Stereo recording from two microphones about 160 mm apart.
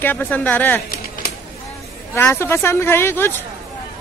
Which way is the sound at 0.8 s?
65° left (ahead or behind).